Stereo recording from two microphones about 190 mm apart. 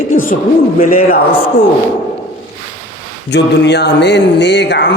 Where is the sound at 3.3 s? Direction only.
65° left (ahead or behind).